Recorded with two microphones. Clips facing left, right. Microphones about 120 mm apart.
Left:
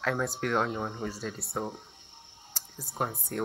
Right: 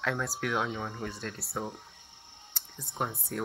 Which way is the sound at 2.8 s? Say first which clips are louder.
Left 1 dB; 5° left (ahead or behind).